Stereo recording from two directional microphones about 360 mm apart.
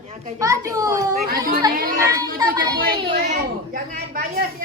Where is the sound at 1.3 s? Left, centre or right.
Right.